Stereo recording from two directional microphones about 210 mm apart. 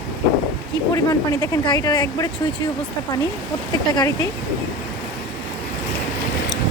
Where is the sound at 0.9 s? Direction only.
15° left (ahead or behind).